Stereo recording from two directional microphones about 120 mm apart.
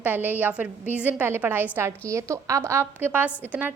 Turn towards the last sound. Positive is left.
turn(degrees=-15)  # may be behind; listen again after turning